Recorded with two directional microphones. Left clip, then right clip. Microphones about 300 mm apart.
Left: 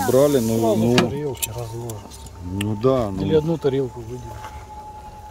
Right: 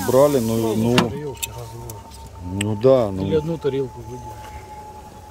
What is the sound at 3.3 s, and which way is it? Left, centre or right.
Speech, left.